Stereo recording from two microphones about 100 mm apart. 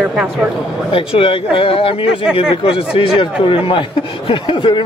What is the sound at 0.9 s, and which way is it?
A man's voice, 65° left (ahead or behind).